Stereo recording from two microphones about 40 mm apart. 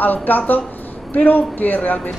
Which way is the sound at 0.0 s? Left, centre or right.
Left.